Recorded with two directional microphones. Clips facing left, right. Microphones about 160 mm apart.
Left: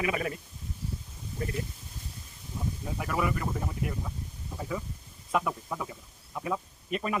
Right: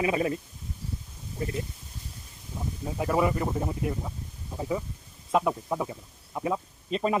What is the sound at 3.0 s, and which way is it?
Speech, 25° right (ahead or behind).